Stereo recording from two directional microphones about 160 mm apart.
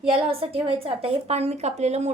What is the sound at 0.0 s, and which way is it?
A woman's voice, 35° right (ahead or behind).